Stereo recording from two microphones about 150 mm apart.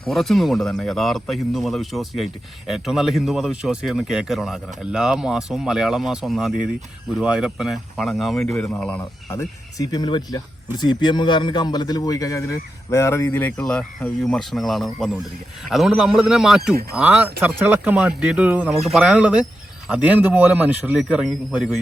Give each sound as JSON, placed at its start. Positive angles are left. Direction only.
{"t": 0.0, "sound": "a man's voice", "side_deg": 0}